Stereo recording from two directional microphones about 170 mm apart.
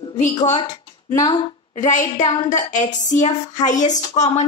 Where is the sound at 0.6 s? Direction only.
25° left (ahead or behind).